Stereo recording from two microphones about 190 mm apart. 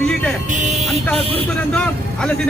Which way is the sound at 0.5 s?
40° right (ahead or behind).